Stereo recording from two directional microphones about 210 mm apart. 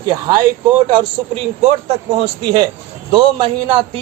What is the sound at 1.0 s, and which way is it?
A man's voice, 30° right (ahead or behind).